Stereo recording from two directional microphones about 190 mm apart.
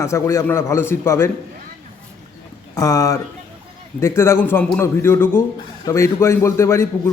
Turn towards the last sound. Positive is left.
turn(degrees=15)  # may be behind; listen again after turning